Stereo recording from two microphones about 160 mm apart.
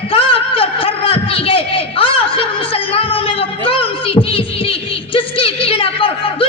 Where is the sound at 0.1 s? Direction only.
35° left (ahead or behind).